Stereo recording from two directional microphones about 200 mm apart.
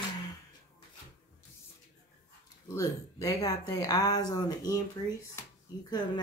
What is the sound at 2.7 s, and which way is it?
Speech, 15° left (ahead or behind).